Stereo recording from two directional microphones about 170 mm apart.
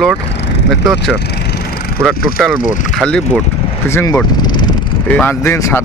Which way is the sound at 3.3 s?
15° left (ahead or behind).